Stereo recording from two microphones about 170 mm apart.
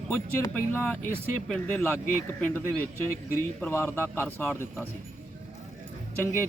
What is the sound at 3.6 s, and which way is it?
A man's voice, 15° left (ahead or behind).